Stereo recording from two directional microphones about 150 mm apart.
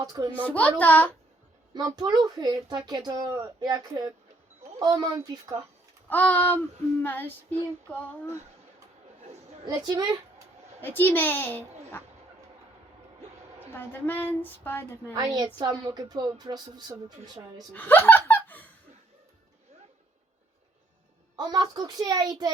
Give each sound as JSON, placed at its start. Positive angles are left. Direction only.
{"t": 0.0, "sound": "a woman's voice", "side_deg": -25}
{"t": 0.4, "sound": "speech", "side_deg": 10}
{"t": 1.7, "sound": "a woman's voice", "side_deg": -25}
{"t": 6.1, "sound": "speech", "side_deg": 10}
{"t": 9.2, "sound": "chatter", "side_deg": -45}
{"t": 9.6, "sound": "a woman's voice", "side_deg": -30}
{"t": 10.8, "sound": "speech", "side_deg": 15}
{"t": 13.7, "sound": "speech", "side_deg": 15}
{"t": 15.1, "sound": "a woman's voice", "side_deg": -25}
{"t": 17.7, "sound": "speech", "side_deg": 15}
{"t": 21.3, "sound": "a woman's voice", "side_deg": -25}